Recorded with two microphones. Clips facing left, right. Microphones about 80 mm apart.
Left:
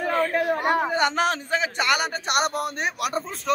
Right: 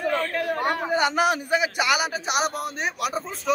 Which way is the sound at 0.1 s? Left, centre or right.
Centre.